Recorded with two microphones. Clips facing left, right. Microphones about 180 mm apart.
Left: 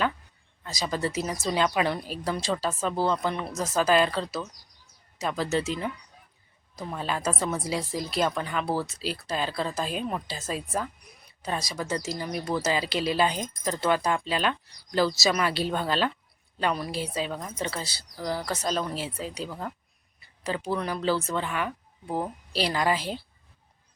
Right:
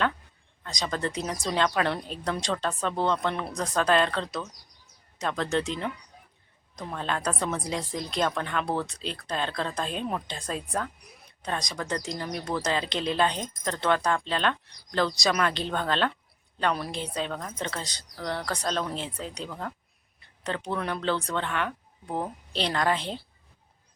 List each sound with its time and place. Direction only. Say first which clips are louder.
0.6 s speech: left 1 dB; 5° left (ahead or behind)